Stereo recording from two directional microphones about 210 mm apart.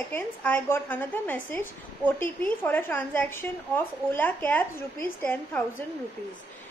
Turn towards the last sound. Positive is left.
turn(degrees=10)  # may be behind; listen again after turning